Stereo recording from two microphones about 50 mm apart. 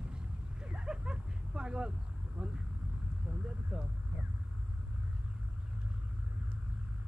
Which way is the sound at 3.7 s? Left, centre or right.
Centre.